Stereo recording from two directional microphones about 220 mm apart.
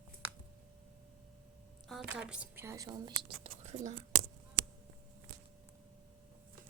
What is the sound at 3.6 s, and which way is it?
Speech, 30° right (ahead or behind).